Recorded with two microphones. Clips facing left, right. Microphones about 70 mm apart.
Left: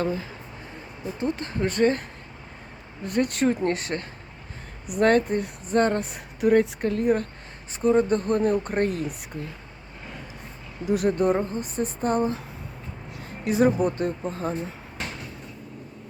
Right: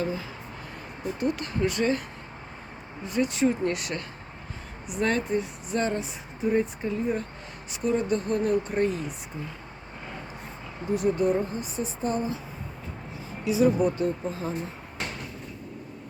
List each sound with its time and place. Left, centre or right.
0.0 s speech: left
1.2 s speech: left
3.0 s speech: left
3.7 s speech: left
4.9 s speech: left
6.4 s speech: left
7.7 s speech: left
10.8 s speech: right
11.2 s speech: left
13.1 s a sound: left
13.8 s speech: left